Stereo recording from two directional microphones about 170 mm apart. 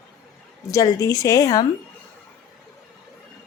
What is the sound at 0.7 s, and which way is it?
Speech, 20° left (ahead or behind).